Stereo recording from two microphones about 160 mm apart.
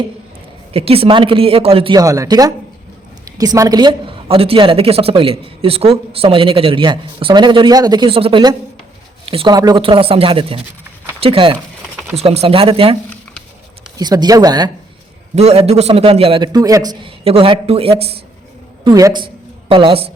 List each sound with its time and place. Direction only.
0.7 s a woman's voice: 35° right (ahead or behind)
2.0 s a woman's voice: 20° right (ahead or behind)
14.0 s speech: 25° right (ahead or behind)
15.4 s a woman's voice: 40° right (ahead or behind)
16.5 s a woman's voice: 25° right (ahead or behind)
18.9 s a woman's voice: 25° right (ahead or behind)